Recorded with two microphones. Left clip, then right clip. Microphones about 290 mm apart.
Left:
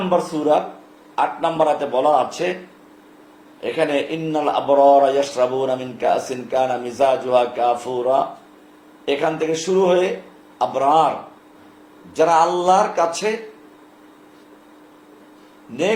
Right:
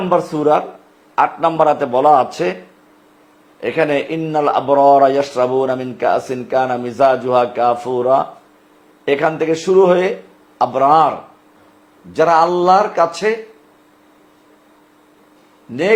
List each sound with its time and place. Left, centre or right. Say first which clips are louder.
0.1 s speech: right 4 dB; right
3.6 s speech: right 4 dB; right
10.6 s a man's voice: right 4 dB; right
12.1 s speech: right 3 dB; right